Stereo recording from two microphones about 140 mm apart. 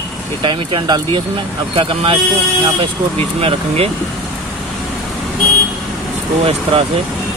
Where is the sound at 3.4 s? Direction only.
45° right (ahead or behind).